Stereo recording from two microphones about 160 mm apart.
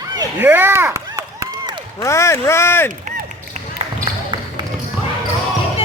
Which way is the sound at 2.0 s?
20° left (ahead or behind).